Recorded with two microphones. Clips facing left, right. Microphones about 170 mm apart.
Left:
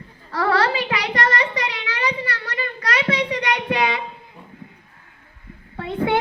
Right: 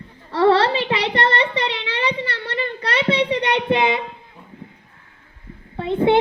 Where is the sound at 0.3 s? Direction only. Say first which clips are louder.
Right 5 dB; 25° right (ahead or behind).